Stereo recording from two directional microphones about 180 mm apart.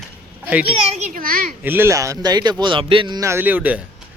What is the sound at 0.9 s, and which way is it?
Speech, 45° right (ahead or behind).